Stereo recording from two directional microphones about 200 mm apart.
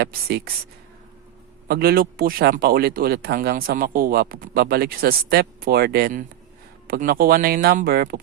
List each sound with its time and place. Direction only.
0.0 s speech: 50° right (ahead or behind)
1.6 s speech: 50° right (ahead or behind)